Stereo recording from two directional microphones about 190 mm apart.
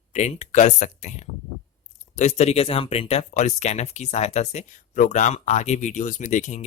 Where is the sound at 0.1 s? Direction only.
35° left (ahead or behind).